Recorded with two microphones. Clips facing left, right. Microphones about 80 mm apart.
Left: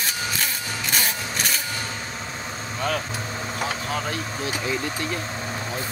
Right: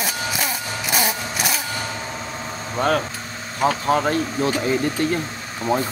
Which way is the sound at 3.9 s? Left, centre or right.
Right.